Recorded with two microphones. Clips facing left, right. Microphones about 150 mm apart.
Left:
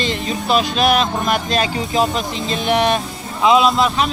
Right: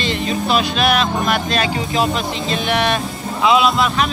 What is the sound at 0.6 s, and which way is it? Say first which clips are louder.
Speech: left 1 dB; 40° left (ahead or behind).